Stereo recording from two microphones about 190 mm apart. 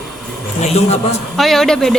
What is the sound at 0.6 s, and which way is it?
Speech, 35° left (ahead or behind).